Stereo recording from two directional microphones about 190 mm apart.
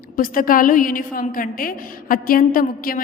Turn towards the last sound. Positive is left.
turn(degrees=50)  # may be behind; listen again after turning